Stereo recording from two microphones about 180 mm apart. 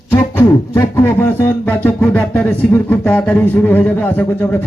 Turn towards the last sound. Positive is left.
turn(degrees=10)  # may be behind; listen again after turning